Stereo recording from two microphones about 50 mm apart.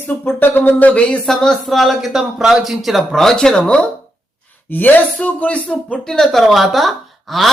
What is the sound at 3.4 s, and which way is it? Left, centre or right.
Speech, centre.